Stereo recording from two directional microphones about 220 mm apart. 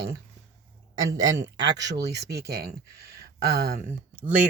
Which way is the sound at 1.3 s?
55° right (ahead or behind).